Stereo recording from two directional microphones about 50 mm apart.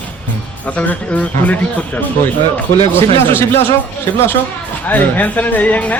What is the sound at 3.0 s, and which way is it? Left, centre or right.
Speech, left.